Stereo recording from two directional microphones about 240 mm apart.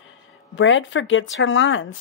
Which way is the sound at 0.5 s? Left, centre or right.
Left.